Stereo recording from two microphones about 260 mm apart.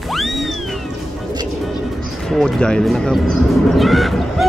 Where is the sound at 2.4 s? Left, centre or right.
Centre.